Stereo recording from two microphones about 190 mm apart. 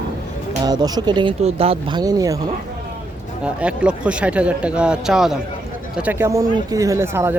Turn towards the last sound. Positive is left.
turn(degrees=-10)  # may be behind; listen again after turning